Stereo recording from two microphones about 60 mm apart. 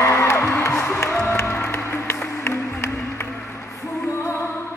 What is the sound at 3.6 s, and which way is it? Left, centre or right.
Music, left.